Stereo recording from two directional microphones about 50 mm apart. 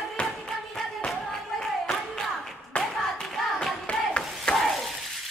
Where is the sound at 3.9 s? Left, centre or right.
Centre.